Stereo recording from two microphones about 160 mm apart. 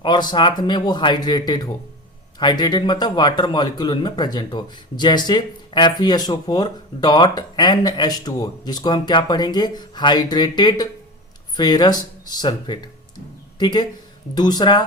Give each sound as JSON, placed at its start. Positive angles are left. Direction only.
{"t": 0.0, "sound": "a man's voice", "side_deg": 25}